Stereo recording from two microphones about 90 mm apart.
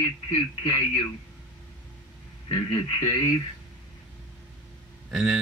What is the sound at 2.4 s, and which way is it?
Speech, 70° left (ahead or behind).